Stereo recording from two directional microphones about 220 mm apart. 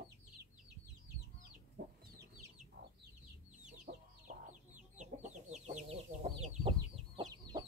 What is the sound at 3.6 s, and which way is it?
Chicken, 35° right (ahead or behind).